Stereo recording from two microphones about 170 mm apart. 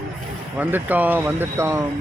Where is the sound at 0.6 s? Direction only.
10° right (ahead or behind).